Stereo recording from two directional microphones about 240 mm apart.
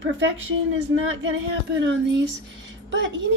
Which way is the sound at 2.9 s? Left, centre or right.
Right.